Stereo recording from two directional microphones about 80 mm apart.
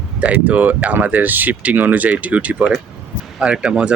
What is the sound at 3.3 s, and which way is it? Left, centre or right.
Speech, centre.